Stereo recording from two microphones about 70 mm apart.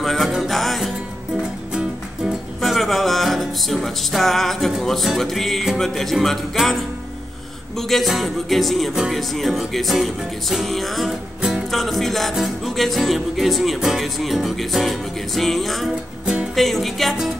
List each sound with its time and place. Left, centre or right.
0.0 s music: centre
1.7 s music: centre
2.6 s music: centre